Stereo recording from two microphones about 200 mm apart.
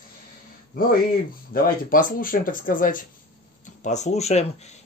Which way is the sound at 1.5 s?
45° left (ahead or behind).